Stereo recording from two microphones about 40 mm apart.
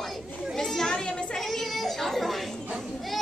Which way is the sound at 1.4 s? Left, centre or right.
Centre.